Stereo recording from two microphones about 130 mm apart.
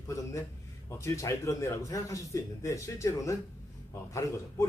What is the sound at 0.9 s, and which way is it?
A man's voice, 25° left (ahead or behind).